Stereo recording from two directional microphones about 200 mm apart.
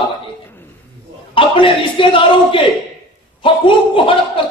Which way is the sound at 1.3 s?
25° left (ahead or behind).